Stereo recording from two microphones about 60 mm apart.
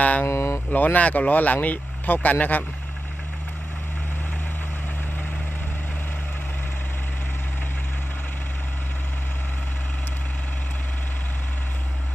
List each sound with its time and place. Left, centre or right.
0.0 s speech: left
0.3 s a sound: left
0.7 s speech: left